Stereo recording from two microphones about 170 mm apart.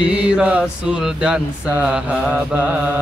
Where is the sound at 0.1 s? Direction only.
5° right (ahead or behind).